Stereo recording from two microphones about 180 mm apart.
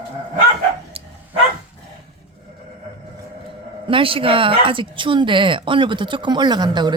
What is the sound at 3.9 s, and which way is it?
Speech, 30° right (ahead or behind).